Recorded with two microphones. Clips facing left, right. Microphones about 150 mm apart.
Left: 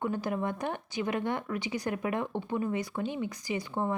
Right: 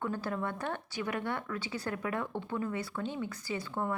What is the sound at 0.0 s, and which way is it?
A woman's voice, 15° left (ahead or behind).